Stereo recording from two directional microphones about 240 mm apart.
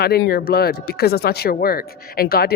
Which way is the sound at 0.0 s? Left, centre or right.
Left.